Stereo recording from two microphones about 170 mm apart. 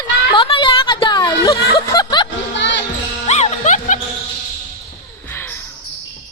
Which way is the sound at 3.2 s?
40° left (ahead or behind).